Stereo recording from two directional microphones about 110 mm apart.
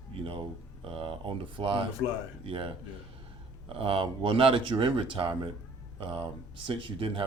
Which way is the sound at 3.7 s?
55° right (ahead or behind).